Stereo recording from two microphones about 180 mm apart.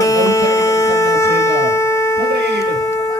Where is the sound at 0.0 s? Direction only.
20° left (ahead or behind).